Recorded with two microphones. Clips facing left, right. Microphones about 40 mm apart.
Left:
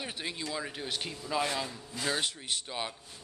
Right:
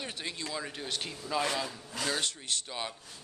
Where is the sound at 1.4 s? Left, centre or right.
Centre.